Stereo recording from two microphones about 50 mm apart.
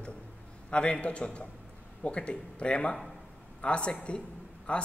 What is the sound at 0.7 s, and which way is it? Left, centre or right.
Speech, left.